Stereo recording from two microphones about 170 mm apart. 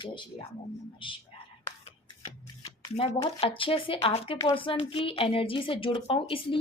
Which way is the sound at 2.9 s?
35° left (ahead or behind).